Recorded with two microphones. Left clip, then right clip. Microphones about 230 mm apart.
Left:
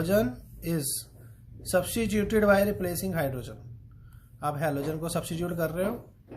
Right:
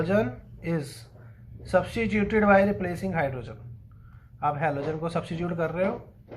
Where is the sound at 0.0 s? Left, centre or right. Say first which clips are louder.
Right 1 dB; left.